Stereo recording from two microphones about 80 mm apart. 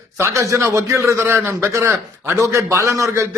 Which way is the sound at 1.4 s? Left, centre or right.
Right.